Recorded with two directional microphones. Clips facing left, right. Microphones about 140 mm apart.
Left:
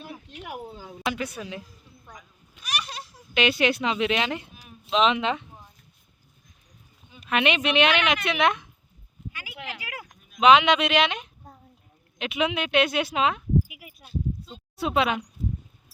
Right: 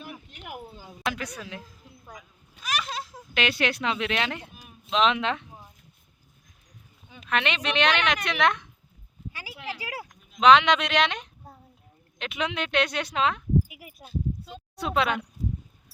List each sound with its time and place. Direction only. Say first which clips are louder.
1.0 s speech: left 2 dB; 5° left (ahead or behind)
3.3 s speech: left 4 dB; centre (ahead or behind)
7.3 s a woman's voice: left 4 dB; 10° left (ahead or behind)
9.3 s a sound: right 1 dB; 35° right (ahead or behind)
10.4 s a woman's voice: left 1 dB; 10° left (ahead or behind)
13.7 s bleat: right 1 dB; 45° right (ahead or behind)
14.8 s speech: left 2 dB; 5° left (ahead or behind)